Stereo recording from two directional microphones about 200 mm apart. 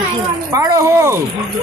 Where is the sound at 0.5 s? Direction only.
15° right (ahead or behind).